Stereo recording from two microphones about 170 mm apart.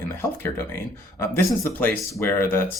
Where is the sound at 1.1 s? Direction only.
15° left (ahead or behind).